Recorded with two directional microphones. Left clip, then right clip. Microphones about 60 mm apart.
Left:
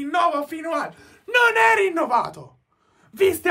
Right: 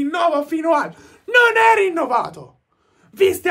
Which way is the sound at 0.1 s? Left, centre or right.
Right.